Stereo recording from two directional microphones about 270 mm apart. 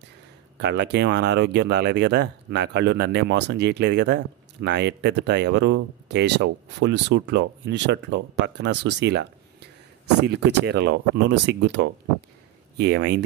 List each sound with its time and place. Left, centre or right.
0.6 s speech: right